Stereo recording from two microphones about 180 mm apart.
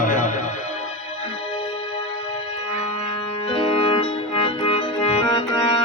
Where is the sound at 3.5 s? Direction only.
30° left (ahead or behind).